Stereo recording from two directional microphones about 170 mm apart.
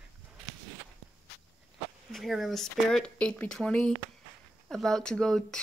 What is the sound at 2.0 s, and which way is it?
Speech, centre (ahead or behind).